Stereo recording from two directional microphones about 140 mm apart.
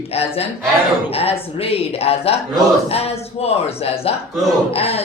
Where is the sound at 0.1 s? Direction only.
45° left (ahead or behind).